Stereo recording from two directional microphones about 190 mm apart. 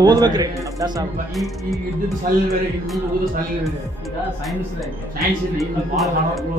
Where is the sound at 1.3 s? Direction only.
Centre (ahead or behind).